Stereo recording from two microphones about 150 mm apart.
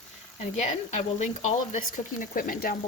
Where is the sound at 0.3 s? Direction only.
50° left (ahead or behind).